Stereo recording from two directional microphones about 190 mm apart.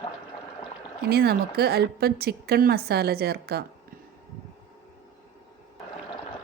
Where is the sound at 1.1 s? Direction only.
55° right (ahead or behind).